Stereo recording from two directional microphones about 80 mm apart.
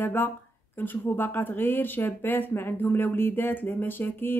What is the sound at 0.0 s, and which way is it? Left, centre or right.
Speech, left.